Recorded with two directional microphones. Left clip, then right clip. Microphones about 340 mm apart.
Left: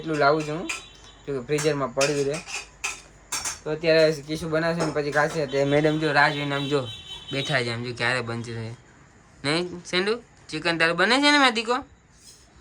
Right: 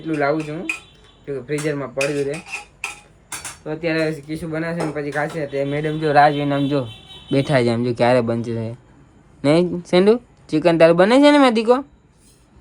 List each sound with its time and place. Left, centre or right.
0.0 s speech: centre
3.6 s speech: centre
6.0 s speech: centre
7.3 s speech: centre